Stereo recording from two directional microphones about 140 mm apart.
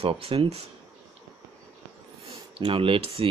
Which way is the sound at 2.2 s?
40° right (ahead or behind).